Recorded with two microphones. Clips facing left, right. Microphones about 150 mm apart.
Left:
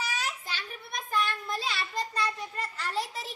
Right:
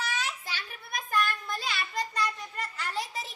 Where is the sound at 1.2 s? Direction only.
30° left (ahead or behind).